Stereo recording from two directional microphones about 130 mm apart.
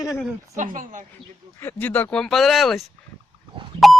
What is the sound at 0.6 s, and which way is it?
Speech, 80° right.